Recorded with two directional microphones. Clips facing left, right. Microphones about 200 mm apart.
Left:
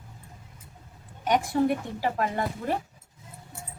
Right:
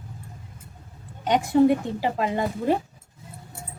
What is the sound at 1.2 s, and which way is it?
Speech, 20° right (ahead or behind).